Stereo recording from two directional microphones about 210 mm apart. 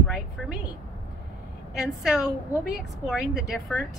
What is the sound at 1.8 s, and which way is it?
Speech, centre (ahead or behind).